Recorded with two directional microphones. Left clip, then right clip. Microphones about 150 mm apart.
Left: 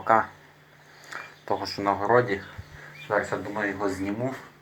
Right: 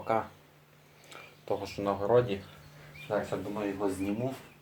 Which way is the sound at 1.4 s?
20° left (ahead or behind).